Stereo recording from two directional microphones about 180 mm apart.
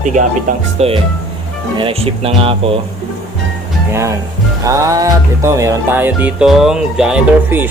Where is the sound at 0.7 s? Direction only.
35° right (ahead or behind).